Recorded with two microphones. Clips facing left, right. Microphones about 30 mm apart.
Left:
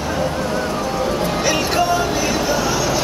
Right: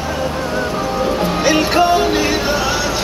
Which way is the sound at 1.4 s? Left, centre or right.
Right.